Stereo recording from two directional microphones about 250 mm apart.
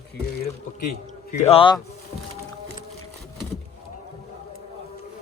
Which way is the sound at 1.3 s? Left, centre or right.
Left.